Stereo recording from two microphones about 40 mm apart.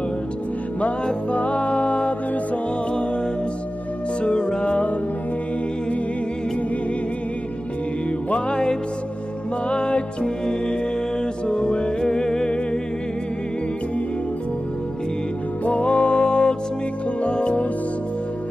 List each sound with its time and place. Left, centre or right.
1.3 s music: left
4.2 s music: left
8.5 s music: centre
15.6 s music: left